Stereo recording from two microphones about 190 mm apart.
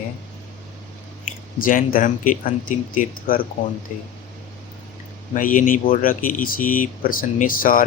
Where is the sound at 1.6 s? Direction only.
45° left (ahead or behind).